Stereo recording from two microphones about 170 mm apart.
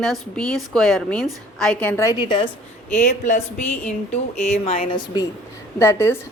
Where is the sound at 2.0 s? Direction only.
20° left (ahead or behind).